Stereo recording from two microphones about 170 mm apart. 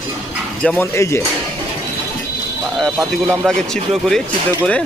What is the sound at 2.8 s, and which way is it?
Speech, centre (ahead or behind).